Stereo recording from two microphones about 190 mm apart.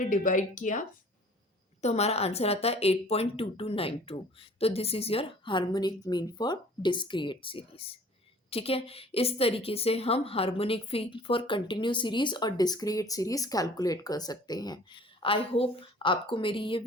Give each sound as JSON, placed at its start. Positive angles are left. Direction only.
{"t": 0.0, "sound": "a woman's voice", "side_deg": 45}